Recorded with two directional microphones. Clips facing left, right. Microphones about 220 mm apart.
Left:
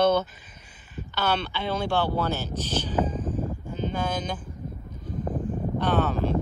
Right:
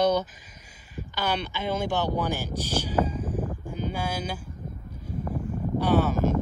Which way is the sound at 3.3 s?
10° right (ahead or behind).